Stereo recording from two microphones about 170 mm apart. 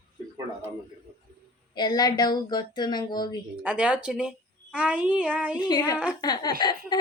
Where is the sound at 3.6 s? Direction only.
10° right (ahead or behind).